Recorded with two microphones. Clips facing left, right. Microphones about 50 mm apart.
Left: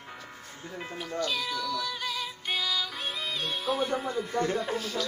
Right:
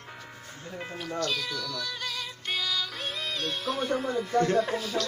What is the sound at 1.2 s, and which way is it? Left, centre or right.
Cat, centre.